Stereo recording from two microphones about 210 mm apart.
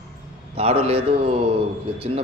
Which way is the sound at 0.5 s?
30° right (ahead or behind).